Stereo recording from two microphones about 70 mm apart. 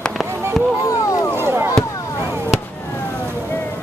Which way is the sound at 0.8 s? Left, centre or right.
Left.